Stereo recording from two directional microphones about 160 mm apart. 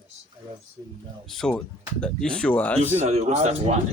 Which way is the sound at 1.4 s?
5° left (ahead or behind).